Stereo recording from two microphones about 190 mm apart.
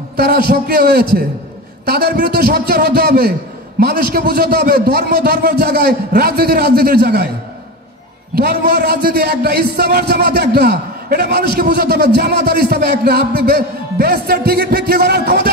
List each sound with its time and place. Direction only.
0.2 s a man's voice: 55° right (ahead or behind)
8.4 s a man's voice: 60° right (ahead or behind)